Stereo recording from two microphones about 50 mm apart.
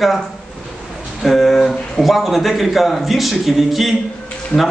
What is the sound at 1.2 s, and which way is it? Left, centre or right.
A man's voice, centre.